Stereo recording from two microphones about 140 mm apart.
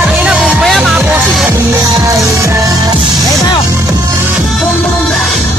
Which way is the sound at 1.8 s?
25° right (ahead or behind).